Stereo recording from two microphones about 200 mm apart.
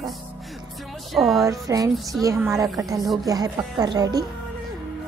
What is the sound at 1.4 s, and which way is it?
A woman's voice, 15° right (ahead or behind).